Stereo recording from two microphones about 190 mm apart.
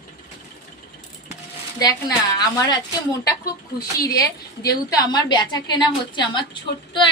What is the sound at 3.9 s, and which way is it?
A woman's voice, 15° left (ahead or behind).